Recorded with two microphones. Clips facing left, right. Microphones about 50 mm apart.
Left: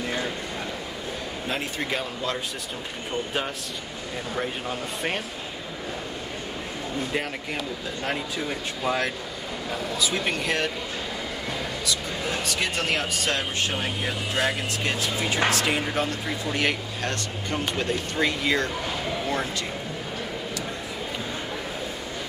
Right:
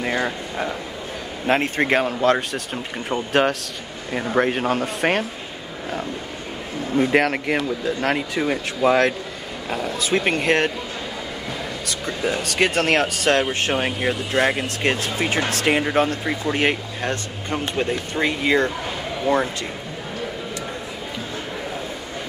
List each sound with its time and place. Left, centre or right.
0.0 s a sound: right
1.5 s speech: right
3.3 s speech: right
4.1 s speech: right
7.0 s speech: right
9.7 s speech: right
12.4 s speech: right